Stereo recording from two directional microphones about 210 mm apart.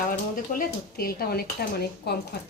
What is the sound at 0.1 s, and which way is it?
Speech, 45° left (ahead or behind).